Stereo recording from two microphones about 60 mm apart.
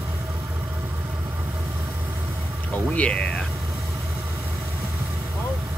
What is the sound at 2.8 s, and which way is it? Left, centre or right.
Speech, left.